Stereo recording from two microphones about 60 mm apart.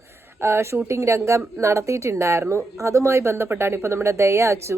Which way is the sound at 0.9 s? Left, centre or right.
Right.